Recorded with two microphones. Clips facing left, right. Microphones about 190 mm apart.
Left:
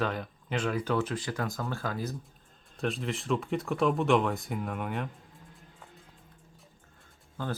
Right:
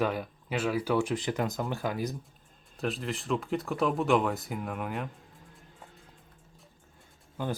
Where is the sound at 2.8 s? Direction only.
Centre (ahead or behind).